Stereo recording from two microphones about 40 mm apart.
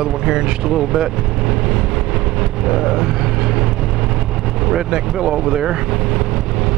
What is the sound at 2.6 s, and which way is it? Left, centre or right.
Vehicle, centre.